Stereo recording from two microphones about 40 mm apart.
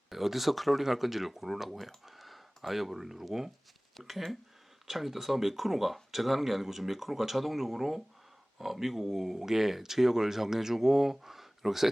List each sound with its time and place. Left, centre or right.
0.1 s speech: centre
3.9 s speech: centre